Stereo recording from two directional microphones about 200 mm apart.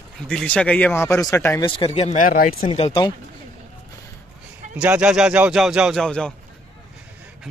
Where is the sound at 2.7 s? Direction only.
30° left (ahead or behind).